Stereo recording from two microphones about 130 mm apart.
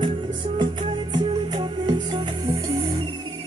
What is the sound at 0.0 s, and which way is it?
Music, 40° right (ahead or behind).